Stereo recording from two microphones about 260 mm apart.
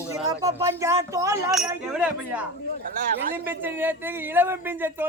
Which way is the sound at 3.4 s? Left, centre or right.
Centre.